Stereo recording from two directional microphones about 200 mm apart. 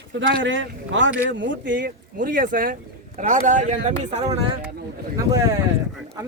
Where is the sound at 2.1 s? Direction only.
40° right (ahead or behind).